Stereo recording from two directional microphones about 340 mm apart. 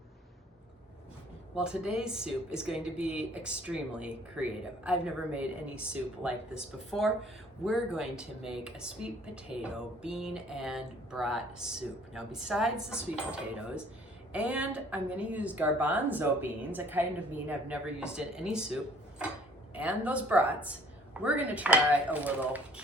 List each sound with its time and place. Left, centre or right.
1.5 s speech: centre